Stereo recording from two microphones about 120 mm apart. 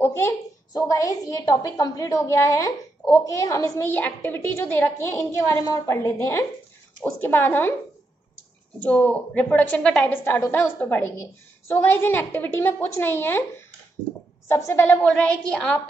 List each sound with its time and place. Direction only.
0.0 s a sound: 20° left (ahead or behind)
0.7 s a woman's voice: 30° left (ahead or behind)
8.7 s a woman's voice: 10° left (ahead or behind)
14.5 s a woman's voice: 20° left (ahead or behind)